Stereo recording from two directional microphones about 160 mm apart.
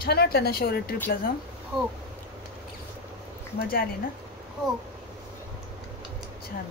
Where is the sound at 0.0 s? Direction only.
75° left (ahead or behind).